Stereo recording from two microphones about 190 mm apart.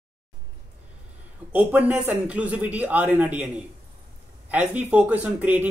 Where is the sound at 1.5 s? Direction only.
10° right (ahead or behind).